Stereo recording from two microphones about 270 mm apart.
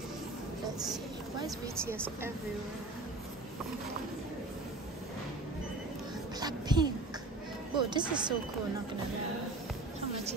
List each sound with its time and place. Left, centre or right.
1.8 s speech: centre
6.4 s speech: centre